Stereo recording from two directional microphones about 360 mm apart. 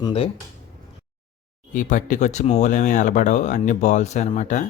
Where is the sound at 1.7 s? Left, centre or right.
Left.